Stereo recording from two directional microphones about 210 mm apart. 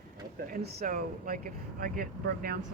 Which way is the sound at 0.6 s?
40° right (ahead or behind).